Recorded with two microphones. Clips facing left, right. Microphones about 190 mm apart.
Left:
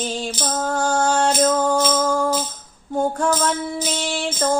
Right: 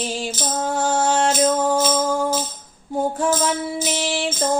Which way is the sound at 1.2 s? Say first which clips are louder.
Even; 20° right (ahead or behind).